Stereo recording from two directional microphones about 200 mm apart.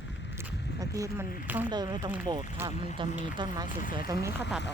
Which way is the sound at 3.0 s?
25° right (ahead or behind).